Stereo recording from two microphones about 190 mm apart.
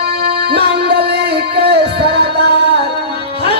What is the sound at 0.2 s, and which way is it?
Music, 60° right (ahead or behind).